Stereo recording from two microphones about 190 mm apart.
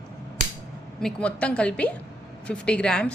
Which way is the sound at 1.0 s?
5° left (ahead or behind).